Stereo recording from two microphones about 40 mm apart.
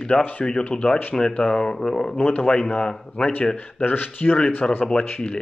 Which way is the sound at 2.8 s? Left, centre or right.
Left.